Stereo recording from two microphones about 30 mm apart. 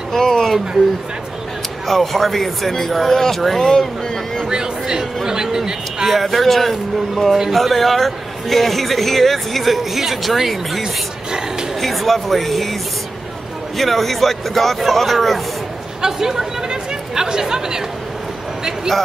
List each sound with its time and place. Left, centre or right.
0.2 s a sound: centre
1.9 s speech: centre
3.6 s speech: centre
4.5 s a sound: right
6.0 s a man's voice: centre
11.8 s speech: centre
13.7 s a man's voice: centre
16.0 s speech: centre
16.6 s chatter: right